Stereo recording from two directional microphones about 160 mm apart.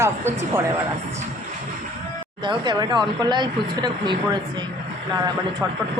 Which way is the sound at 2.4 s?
30° right (ahead or behind).